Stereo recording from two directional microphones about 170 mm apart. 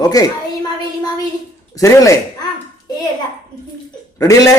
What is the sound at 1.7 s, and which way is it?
Speech, 20° left (ahead or behind).